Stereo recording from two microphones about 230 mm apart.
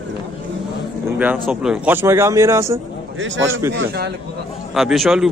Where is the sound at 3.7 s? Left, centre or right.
Right.